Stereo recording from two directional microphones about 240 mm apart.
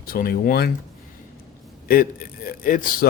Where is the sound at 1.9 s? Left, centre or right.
Left.